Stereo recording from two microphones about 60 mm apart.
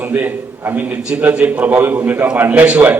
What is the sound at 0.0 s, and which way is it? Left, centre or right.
A man's voice, right.